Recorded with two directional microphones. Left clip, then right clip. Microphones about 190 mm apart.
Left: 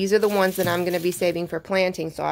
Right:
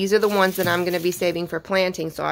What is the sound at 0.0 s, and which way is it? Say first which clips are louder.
Speech: right 1 dB; centre (ahead or behind).